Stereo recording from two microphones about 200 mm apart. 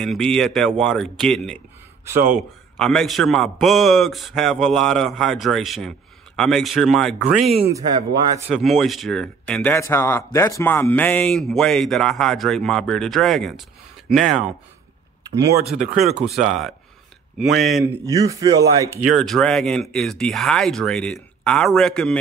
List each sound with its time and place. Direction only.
0.0 s speech: centre (ahead or behind)
2.8 s speech: centre (ahead or behind)
7.7 s speech: 20° right (ahead or behind)
8.5 s speech: centre (ahead or behind)
15.6 s speech: centre (ahead or behind)
18.0 s a man's voice: 15° right (ahead or behind)
19.0 s speech: centre (ahead or behind)